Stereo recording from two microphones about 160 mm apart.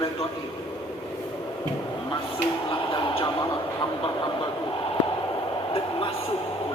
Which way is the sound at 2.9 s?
30° left (ahead or behind).